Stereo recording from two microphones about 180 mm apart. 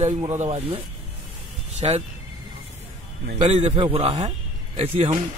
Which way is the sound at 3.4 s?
35° right (ahead or behind).